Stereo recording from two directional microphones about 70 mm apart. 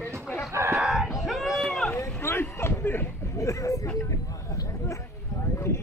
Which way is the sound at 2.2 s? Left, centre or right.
Left.